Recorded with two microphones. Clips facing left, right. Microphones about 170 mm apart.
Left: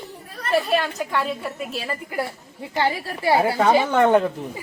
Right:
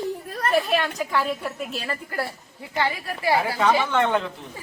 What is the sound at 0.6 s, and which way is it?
A woman's voice, centre (ahead or behind).